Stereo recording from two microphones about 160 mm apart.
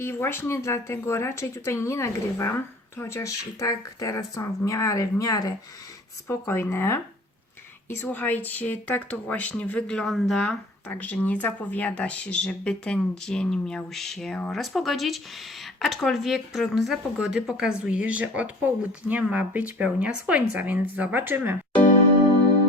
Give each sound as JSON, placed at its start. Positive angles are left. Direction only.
{"t": 0.0, "sound": "speech", "side_deg": 15}